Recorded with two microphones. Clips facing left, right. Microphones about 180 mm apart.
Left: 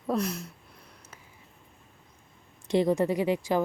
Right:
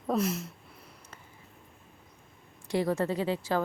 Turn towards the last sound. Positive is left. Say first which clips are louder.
# left 3 dB
turn(degrees=15)  # may be behind; listen again after turning